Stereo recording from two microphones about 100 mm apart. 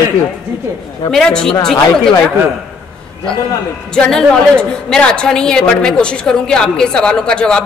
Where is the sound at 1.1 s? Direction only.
5° left (ahead or behind).